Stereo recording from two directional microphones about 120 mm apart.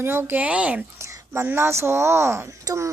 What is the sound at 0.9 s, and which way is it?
A woman's voice, 25° right (ahead or behind).